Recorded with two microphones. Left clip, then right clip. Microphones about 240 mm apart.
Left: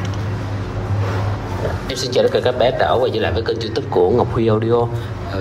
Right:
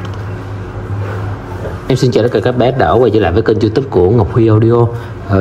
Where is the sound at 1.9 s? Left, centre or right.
Right.